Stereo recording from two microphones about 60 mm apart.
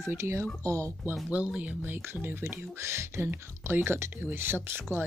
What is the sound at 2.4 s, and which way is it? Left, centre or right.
Speech, right.